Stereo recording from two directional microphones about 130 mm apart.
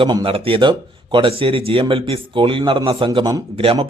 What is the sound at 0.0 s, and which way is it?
Speech, 30° right (ahead or behind).